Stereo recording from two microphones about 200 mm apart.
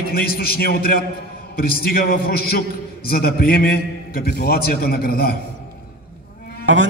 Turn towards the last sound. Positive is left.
turn(degrees=-70)  # may be behind; listen again after turning